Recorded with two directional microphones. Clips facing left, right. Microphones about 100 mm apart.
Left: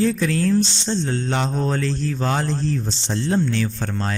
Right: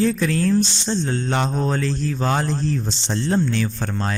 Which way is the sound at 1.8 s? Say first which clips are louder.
Even; 20° right (ahead or behind).